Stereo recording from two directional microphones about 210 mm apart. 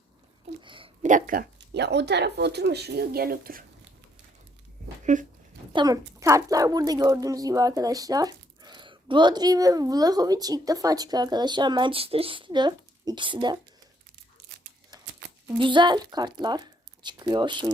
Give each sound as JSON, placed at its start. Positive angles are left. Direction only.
{"t": 0.6, "sound": "speech", "side_deg": -25}
{"t": 1.0, "sound": "speech", "side_deg": -40}
{"t": 5.1, "sound": "speech", "side_deg": -35}
{"t": 5.7, "sound": "speech", "side_deg": -20}
{"t": 15.4, "sound": "speech", "side_deg": -20}